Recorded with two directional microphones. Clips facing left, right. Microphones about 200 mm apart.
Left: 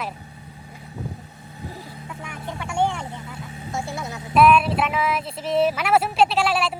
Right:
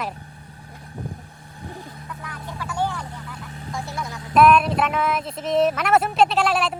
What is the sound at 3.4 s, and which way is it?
Vehicle, 10° left (ahead or behind).